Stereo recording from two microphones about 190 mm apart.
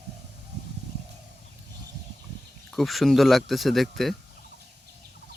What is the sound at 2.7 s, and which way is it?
Speech, centre (ahead or behind).